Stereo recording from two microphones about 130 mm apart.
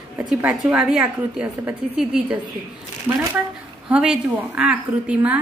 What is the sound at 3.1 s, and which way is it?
Speech, 20° right (ahead or behind).